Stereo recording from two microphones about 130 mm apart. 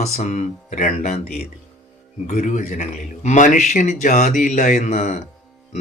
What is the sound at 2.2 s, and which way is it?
Speech, 85° left.